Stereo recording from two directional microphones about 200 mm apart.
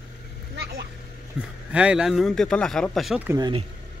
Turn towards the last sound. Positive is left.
turn(degrees=-20)  # may be behind; listen again after turning